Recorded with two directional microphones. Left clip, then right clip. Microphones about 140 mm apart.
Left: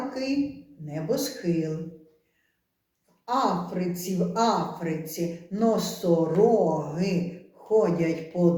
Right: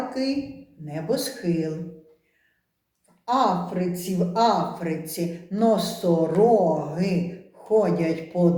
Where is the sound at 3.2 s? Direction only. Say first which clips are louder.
Right 4 dB; 20° right (ahead or behind).